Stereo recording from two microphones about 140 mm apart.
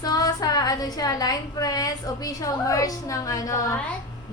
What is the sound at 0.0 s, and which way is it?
A woman's voice, 25° left (ahead or behind).